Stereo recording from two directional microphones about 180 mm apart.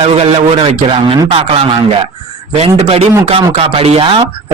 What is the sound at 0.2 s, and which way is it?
Speech, 30° right (ahead or behind).